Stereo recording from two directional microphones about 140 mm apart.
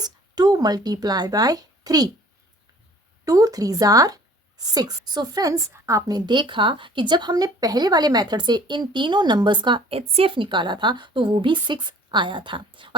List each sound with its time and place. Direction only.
0.0 s speech: 30° right (ahead or behind)
3.2 s speech: 25° right (ahead or behind)